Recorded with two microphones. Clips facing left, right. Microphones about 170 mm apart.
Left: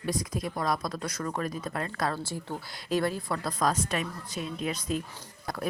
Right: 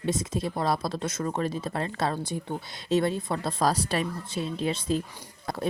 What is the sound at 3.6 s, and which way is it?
Speech, 35° right (ahead or behind).